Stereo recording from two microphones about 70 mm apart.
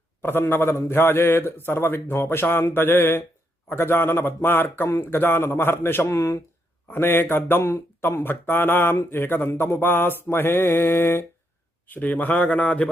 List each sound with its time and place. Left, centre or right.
0.2 s speech: left
6.1 s speech: left
6.9 s speech: left
7.6 s speech: left
11.9 s a man's voice: left